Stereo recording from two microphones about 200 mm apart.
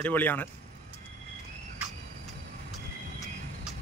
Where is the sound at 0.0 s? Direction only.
10° left (ahead or behind).